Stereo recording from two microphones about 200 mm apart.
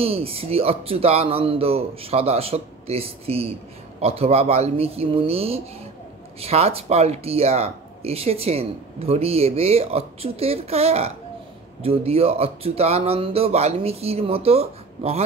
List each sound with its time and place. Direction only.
0.0 s speech: 30° right (ahead or behind)